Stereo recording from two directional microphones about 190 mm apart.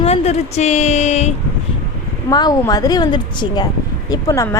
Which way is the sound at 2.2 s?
20° left (ahead or behind).